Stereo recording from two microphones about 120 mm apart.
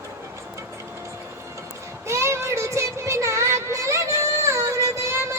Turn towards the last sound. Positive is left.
turn(degrees=-20)  # may be behind; listen again after turning